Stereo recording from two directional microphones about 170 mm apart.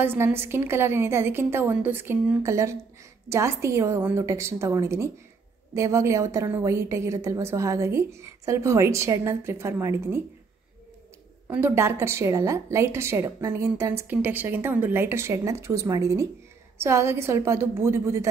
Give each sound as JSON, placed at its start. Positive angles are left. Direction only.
{"t": 0.0, "sound": "a woman's voice", "side_deg": -15}
{"t": 11.4, "sound": "a woman's voice", "side_deg": -10}